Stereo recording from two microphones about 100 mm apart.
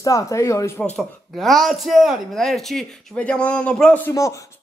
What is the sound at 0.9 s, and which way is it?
Speech, centre (ahead or behind).